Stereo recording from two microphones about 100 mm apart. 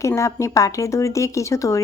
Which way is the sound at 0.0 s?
30° left (ahead or behind).